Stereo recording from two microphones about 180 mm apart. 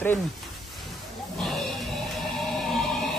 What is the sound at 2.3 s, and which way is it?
Music, centre (ahead or behind).